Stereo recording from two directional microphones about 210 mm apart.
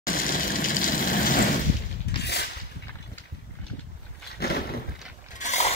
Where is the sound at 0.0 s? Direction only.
45° left (ahead or behind).